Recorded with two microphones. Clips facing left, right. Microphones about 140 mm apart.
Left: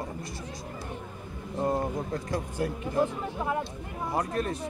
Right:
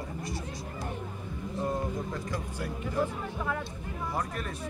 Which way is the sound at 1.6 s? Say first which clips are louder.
Left 4 dB; 40° left (ahead or behind).